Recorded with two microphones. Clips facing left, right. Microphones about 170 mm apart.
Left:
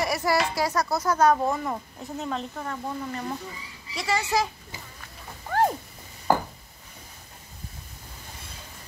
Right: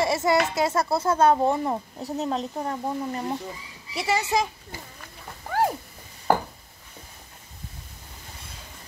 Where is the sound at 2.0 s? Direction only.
35° right (ahead or behind); by 4.4 s 20° right (ahead or behind).